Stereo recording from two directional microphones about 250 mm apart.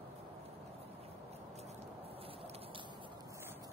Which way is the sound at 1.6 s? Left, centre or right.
Right.